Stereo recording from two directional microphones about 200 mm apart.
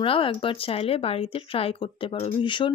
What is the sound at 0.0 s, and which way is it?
Speech, 25° left (ahead or behind).